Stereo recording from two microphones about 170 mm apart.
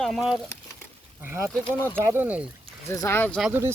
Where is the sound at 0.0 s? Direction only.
Centre (ahead or behind).